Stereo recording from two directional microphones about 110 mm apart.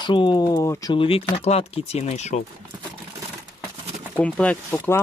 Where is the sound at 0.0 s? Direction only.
45° left (ahead or behind).